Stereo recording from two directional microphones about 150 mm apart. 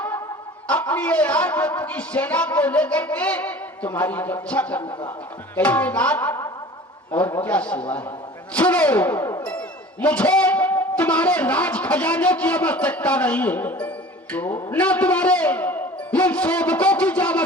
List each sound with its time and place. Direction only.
0.7 s speech: 10° left (ahead or behind)